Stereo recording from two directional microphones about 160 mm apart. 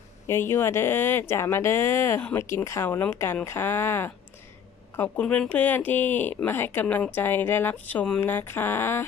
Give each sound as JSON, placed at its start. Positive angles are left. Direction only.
{"t": 0.3, "sound": "speech", "side_deg": 15}